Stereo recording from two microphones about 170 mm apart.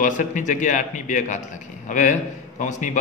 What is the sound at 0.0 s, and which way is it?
A man's voice, 50° left (ahead or behind).